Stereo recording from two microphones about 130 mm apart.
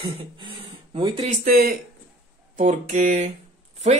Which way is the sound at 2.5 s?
65° right (ahead or behind).